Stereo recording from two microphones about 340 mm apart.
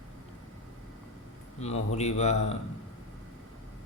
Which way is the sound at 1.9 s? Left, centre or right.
Centre.